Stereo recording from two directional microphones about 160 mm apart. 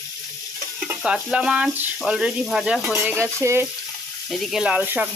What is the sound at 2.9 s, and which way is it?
Speech, 15° right (ahead or behind).